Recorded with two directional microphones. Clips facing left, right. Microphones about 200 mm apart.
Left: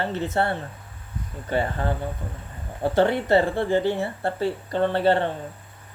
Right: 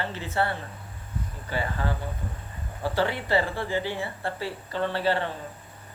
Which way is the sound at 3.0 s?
50° left (ahead or behind).